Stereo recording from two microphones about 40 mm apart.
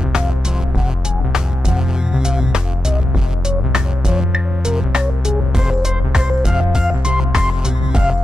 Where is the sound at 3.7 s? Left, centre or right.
Centre.